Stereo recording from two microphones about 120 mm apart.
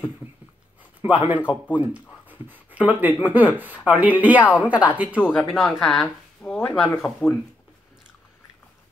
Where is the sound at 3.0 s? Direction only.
15° right (ahead or behind).